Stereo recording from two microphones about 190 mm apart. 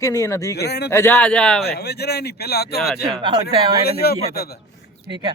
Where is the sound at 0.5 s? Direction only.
60° left (ahead or behind).